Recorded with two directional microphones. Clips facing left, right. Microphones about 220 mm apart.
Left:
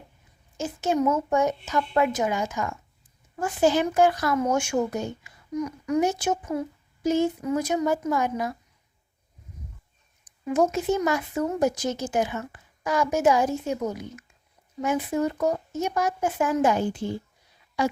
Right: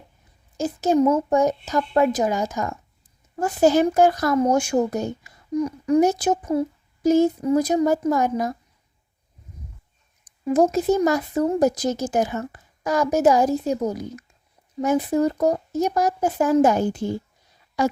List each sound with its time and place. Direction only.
0.5 s speech: 40° right (ahead or behind)
10.4 s speech: 35° right (ahead or behind)